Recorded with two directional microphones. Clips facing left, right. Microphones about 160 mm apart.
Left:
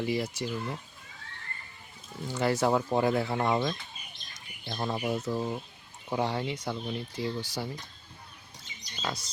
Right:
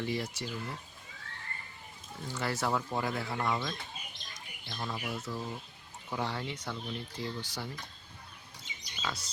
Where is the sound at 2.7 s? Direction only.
30° left (ahead or behind).